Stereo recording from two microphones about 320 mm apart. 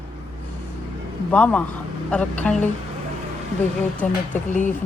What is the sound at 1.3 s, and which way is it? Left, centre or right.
Speech, centre.